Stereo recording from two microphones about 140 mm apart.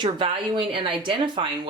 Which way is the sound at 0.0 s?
35° right (ahead or behind).